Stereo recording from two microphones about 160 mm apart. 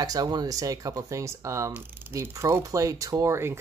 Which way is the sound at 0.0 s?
25° right (ahead or behind).